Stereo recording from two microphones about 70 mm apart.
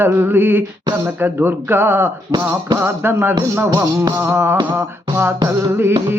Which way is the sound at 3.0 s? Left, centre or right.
Right.